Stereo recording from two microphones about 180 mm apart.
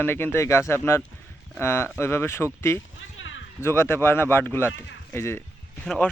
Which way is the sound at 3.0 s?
90° left.